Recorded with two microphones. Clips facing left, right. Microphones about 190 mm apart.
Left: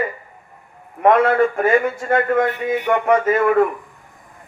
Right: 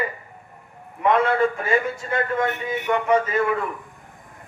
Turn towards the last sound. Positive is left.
turn(degrees=55)  # may be behind; listen again after turning